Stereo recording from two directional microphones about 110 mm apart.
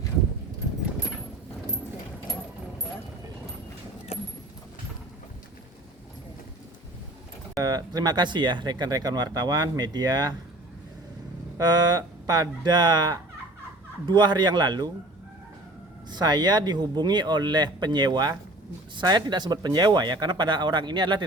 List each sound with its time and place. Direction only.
4.1 s vehicle: 65° left (ahead or behind)
7.6 s speech: 35° right (ahead or behind)
11.5 s speech: 35° right (ahead or behind)
16.0 s speech: 40° right (ahead or behind)